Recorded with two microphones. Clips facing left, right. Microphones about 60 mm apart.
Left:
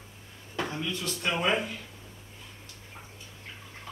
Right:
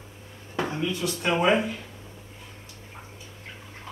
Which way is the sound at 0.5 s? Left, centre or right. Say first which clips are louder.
Right 5 dB; centre.